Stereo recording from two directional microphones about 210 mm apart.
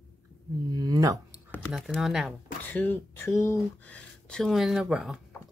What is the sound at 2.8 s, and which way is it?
Speech, 10° left (ahead or behind).